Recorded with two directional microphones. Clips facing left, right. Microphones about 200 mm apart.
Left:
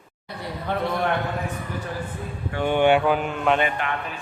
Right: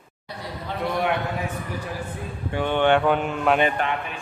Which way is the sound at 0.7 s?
55° left (ahead or behind).